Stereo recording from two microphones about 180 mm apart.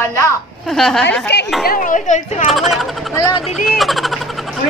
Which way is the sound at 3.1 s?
20° left (ahead or behind).